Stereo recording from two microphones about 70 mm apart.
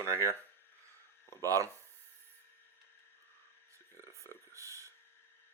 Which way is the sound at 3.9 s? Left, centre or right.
Right.